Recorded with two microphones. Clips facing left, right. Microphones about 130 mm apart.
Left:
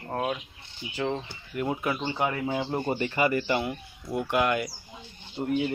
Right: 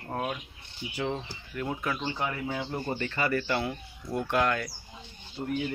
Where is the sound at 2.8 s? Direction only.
15° left (ahead or behind).